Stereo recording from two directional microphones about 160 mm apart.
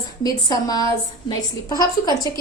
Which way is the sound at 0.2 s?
25° left (ahead or behind).